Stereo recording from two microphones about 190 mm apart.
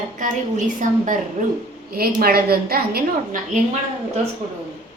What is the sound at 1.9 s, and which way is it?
A woman's voice, 55° right (ahead or behind).